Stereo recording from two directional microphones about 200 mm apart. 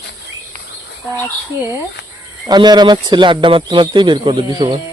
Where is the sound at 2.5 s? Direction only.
20° right (ahead or behind).